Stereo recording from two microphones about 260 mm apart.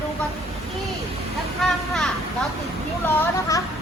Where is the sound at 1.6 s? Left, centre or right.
Centre.